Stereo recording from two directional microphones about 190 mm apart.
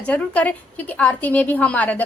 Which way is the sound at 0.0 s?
5° left (ahead or behind).